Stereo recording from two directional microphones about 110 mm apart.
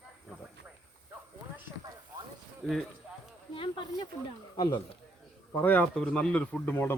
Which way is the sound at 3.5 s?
50° left (ahead or behind).